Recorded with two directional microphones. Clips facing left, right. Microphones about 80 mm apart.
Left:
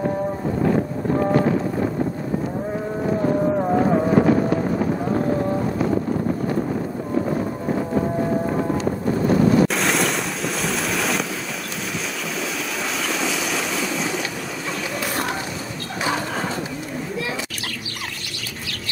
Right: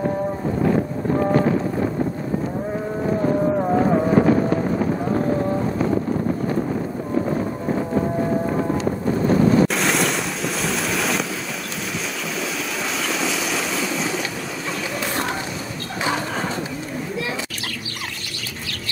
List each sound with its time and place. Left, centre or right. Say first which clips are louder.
1.2 s run: even; right
3.4 s vehicle: even; centre
4.1 s fireworks: even; right
5.3 s boat: even; right
9.2 s a sound: even; right
9.7 s boat: even; centre
13.0 s vehicle: even; centre